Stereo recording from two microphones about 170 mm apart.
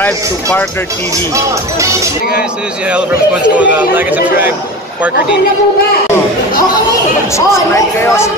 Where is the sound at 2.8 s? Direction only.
5° right (ahead or behind).